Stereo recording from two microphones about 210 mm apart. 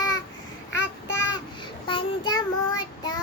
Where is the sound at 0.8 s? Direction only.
55° left (ahead or behind).